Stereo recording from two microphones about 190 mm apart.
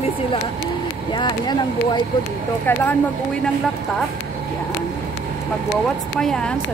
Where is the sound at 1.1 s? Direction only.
20° left (ahead or behind).